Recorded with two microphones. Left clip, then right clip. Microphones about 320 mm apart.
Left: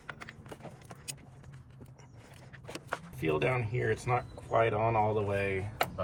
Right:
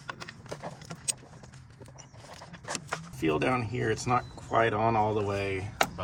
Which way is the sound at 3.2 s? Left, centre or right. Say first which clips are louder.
Right 3 dB; right.